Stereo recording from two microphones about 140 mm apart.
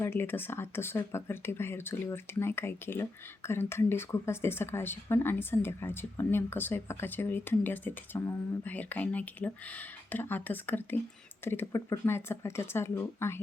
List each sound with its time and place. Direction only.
0.0 s speech: 15° left (ahead or behind)